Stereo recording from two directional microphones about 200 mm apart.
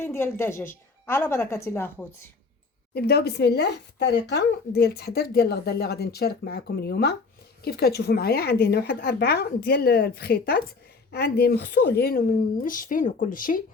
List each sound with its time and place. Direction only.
0.0 s a woman's voice: 10° left (ahead or behind)
2.9 s speech: 50° left (ahead or behind)